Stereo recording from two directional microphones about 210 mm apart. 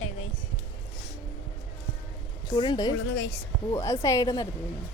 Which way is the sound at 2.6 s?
20° left (ahead or behind).